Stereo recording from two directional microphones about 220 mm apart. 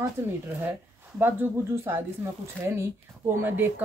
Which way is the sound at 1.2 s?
10° right (ahead or behind).